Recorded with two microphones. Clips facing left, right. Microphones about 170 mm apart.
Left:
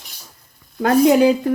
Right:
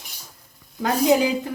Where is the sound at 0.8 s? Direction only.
60° left (ahead or behind).